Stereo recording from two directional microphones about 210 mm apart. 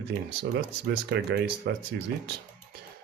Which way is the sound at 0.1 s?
55° right (ahead or behind).